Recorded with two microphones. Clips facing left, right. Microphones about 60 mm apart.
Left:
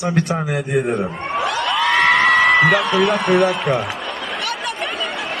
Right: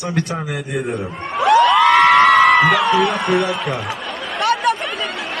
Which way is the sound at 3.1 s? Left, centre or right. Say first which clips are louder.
Left 1 dB; centre.